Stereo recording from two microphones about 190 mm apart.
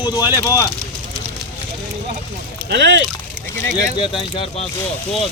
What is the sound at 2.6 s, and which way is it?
Speech, 70° right (ahead or behind).